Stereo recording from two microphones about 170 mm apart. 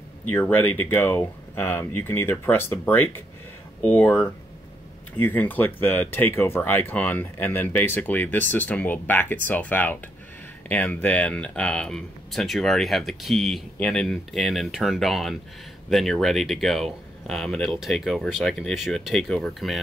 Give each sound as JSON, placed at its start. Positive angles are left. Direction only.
{"t": 0.3, "sound": "speech", "side_deg": 10}